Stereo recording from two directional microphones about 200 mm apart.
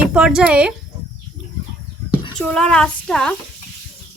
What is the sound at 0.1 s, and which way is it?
Child singing, 5° right (ahead or behind).